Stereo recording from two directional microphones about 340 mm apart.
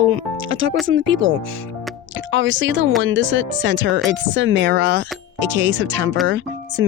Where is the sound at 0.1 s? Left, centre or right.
Right.